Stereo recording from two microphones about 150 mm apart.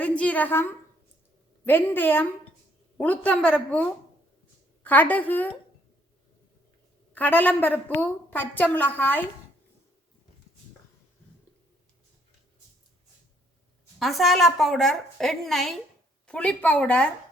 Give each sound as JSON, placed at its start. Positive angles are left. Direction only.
{"t": 0.0, "sound": "a sound", "side_deg": 10}
{"t": 1.6, "sound": "a woman's voice", "side_deg": 15}
{"t": 7.1, "sound": "a woman's voice", "side_deg": 10}
{"t": 14.0, "sound": "a woman's voice", "side_deg": 0}